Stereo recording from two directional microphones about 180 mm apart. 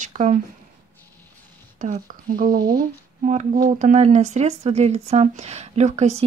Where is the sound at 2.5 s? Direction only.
25° right (ahead or behind).